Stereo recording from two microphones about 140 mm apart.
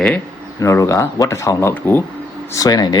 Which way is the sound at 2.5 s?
25° left (ahead or behind).